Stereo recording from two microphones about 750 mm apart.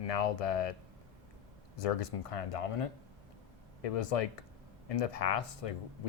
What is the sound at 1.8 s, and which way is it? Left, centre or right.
Speech, left.